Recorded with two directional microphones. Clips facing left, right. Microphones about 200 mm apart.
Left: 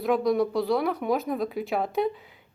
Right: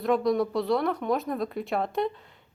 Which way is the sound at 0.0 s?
Centre (ahead or behind).